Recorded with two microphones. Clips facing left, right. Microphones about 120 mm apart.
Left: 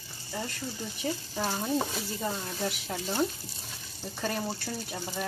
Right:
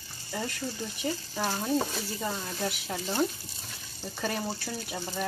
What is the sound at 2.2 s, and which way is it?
Speech, 5° right (ahead or behind).